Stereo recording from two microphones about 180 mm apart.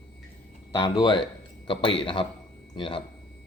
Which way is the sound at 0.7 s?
20° left (ahead or behind).